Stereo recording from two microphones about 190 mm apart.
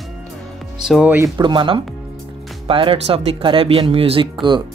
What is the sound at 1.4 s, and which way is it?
Speech, 25° right (ahead or behind).